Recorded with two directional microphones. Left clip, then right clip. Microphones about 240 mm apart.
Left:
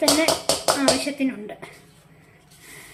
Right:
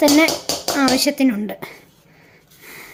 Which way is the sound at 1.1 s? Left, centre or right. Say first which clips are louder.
Right 8 dB; right.